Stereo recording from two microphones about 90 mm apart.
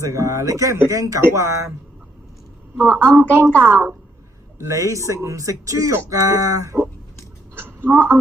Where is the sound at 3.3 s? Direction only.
30° right (ahead or behind).